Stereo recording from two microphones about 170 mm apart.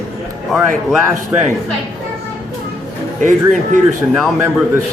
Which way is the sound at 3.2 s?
45° right (ahead or behind).